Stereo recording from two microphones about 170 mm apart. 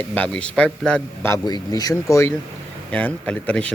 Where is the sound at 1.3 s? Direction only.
20° left (ahead or behind); by 3.6 s 5° left (ahead or behind).